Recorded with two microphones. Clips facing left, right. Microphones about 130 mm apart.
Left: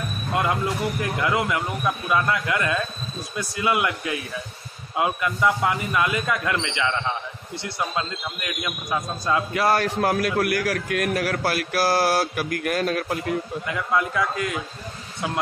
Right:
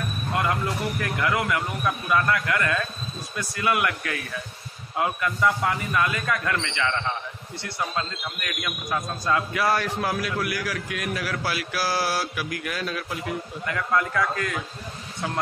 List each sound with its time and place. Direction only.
0.3 s a sound: 25° left (ahead or behind)
1.0 s a man's voice: 25° left (ahead or behind)
9.5 s a man's voice: 30° left (ahead or behind)
10.2 s a man's voice: 55° left (ahead or behind)
13.7 s a man's voice: 15° left (ahead or behind)